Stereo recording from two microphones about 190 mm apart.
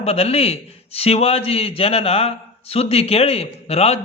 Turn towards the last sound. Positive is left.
turn(degrees=35)  # may be behind; listen again after turning